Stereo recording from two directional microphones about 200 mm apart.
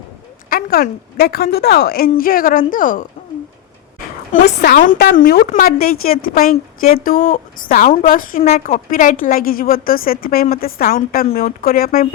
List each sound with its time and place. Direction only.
0.5 s a woman's voice: 50° left (ahead or behind)
4.6 s a woman's voice: 45° left (ahead or behind)